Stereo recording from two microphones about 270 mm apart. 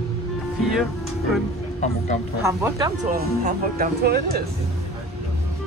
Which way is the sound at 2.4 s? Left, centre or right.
Centre.